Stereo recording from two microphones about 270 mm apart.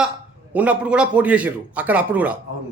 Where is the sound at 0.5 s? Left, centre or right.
Centre.